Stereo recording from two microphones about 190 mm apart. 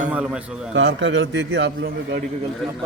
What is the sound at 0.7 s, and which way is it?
A man's voice, 80° right.